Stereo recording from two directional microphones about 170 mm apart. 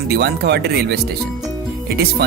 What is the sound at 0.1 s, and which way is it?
Speech, 75° right (ahead or behind).